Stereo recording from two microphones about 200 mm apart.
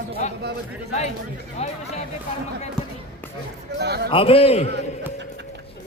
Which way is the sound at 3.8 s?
55° right (ahead or behind).